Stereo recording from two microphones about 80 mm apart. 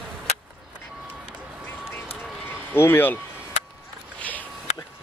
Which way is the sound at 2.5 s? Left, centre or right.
Left.